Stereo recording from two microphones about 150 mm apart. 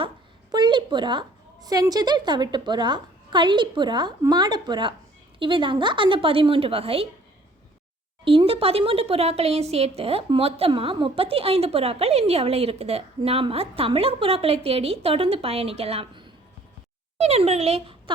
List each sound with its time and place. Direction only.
0.5 s a woman's voice: 30° right (ahead or behind)
8.2 s speech: 35° right (ahead or behind)